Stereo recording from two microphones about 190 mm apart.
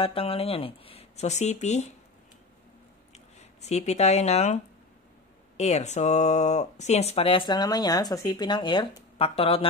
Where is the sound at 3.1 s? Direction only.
35° left (ahead or behind).